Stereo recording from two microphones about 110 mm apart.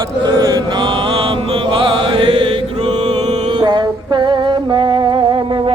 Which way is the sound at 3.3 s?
40° right (ahead or behind).